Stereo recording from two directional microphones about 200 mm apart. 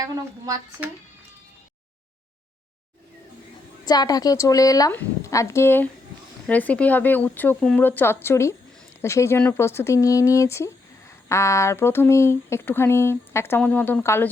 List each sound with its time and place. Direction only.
0.0 s a woman's voice: 15° right (ahead or behind)
3.8 s speech: 20° left (ahead or behind)